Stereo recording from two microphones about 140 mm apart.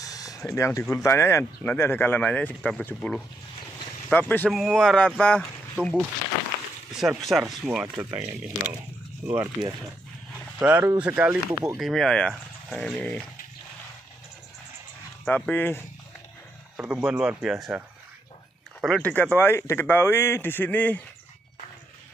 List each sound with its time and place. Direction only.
0.0 s speech: 25° left (ahead or behind)
4.5 s speech: centre (ahead or behind)
7.2 s speech: centre (ahead or behind)
9.4 s speech: 25° right (ahead or behind); by 13.2 s 10° left (ahead or behind)
15.2 s speech: 10° left (ahead or behind)
16.7 s speech: 10° right (ahead or behind)
18.8 s speech: 5° left (ahead or behind)